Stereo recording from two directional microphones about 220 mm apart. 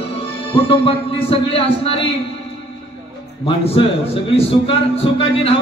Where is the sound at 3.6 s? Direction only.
25° left (ahead or behind).